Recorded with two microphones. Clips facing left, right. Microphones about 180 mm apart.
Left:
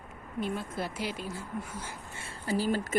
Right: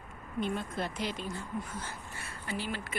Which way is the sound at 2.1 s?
25° left (ahead or behind).